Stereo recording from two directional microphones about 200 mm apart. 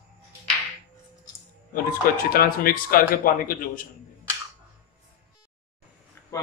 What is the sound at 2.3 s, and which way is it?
Speech, 45° left (ahead or behind).